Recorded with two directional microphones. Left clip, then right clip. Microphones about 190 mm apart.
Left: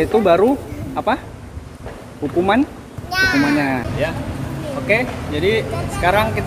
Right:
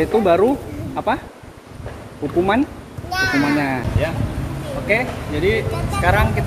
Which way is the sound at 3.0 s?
55° left (ahead or behind).